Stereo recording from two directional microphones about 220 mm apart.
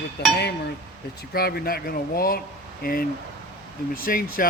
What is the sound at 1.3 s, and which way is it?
Speech, 45° left (ahead or behind).